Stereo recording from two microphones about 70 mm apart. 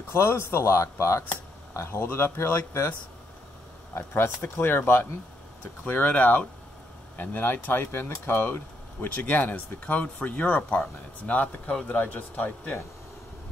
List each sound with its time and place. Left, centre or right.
0.1 s speech: left
3.9 s speech: left
5.9 s speech: left